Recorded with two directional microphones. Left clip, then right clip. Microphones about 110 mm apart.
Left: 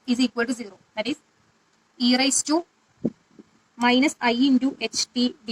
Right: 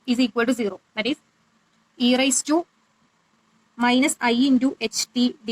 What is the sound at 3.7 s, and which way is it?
Speech, 20° right (ahead or behind).